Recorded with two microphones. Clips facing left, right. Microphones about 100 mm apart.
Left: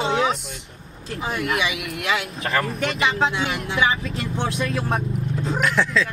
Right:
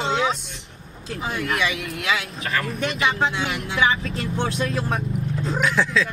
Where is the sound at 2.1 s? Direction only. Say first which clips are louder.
Left 2 dB; 30° left (ahead or behind).